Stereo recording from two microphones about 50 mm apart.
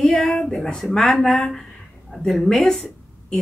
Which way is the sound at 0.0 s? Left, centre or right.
Centre.